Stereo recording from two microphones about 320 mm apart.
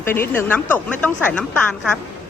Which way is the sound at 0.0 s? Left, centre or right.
Centre.